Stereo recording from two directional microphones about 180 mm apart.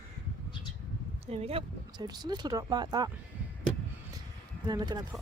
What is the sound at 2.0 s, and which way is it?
Speech, 20° right (ahead or behind).